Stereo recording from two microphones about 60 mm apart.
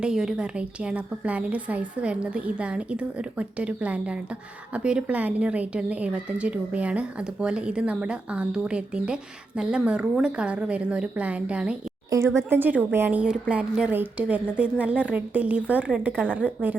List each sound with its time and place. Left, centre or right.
0.0 s a woman's voice: centre
12.1 s speech: right
12.5 s a woman's voice: right
13.1 s a woman's voice: right